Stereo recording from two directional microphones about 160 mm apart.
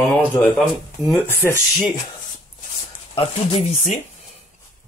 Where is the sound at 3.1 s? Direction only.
40° left (ahead or behind).